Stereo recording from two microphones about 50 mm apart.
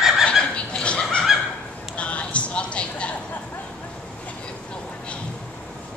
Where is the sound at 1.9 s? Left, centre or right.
Left.